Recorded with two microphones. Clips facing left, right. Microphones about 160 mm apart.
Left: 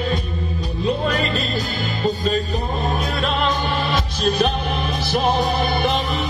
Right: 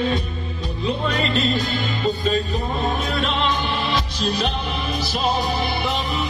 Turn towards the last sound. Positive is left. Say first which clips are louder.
# left 3 dB
turn(degrees=55)  # may be behind; listen again after turning